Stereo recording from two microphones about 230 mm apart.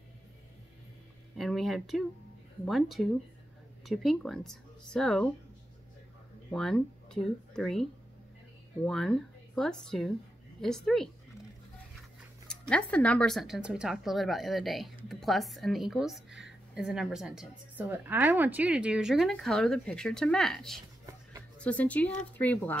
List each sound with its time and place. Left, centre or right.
1.4 s a woman's voice: centre
6.5 s speech: centre
8.8 s a woman's voice: centre
12.4 s a woman's voice: centre
21.0 s a sound: centre
21.5 s speech: centre